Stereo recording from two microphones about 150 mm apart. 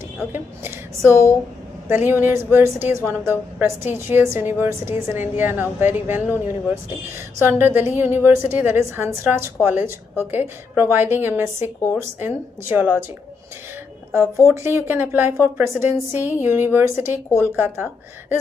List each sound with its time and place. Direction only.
1.0 s speech: 20° left (ahead or behind)
1.9 s a woman's voice: 15° right (ahead or behind)
14.2 s speech: 20° left (ahead or behind)
14.5 s a woman's voice: 15° right (ahead or behind)